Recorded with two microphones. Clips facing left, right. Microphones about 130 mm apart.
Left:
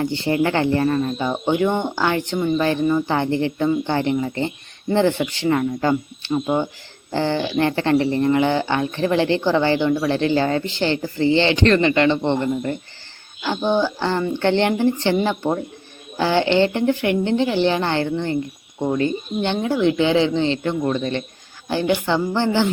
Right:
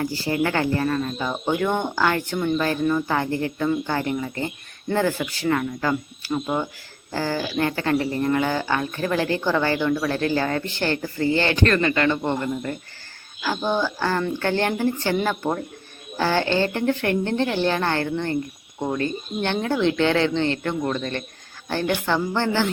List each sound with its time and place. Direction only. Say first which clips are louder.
0.0 s speech: left 4 dB; 25° left (ahead or behind)
3.1 s speech: left 4 dB; 25° left (ahead or behind)